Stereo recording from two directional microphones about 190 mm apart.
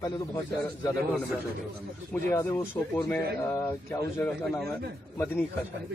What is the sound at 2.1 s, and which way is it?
Speech, 10° left (ahead or behind).